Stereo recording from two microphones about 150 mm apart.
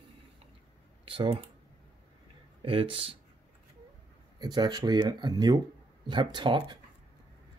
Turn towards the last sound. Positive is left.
turn(degrees=-30)  # may be behind; listen again after turning